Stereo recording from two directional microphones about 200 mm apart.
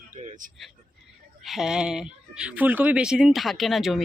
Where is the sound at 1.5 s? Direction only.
Centre (ahead or behind).